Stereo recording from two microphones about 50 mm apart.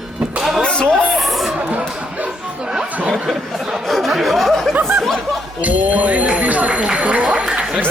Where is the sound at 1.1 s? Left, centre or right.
Centre.